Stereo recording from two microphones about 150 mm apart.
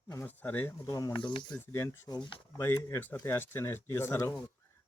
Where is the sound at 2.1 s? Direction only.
30° left (ahead or behind).